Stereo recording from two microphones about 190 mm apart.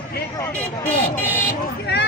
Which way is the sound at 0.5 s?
5° left (ahead or behind).